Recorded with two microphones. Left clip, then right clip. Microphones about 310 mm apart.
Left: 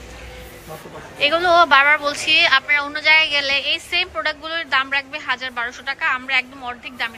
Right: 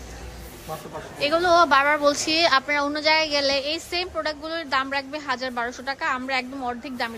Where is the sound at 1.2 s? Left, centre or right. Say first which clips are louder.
Left 4 dB; centre.